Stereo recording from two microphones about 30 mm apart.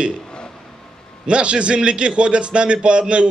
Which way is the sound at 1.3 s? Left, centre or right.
Right.